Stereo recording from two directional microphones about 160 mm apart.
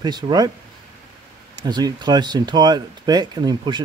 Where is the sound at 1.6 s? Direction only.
25° right (ahead or behind).